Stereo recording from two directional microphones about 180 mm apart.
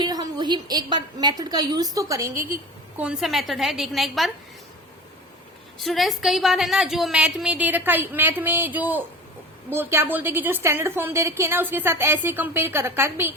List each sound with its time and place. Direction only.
0.0 s a woman's voice: 20° right (ahead or behind)
3.0 s a woman's voice: 5° right (ahead or behind)
5.8 s a woman's voice: centre (ahead or behind)